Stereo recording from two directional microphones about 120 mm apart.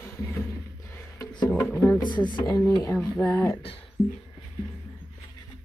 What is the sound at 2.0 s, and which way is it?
Speech, 40° left (ahead or behind).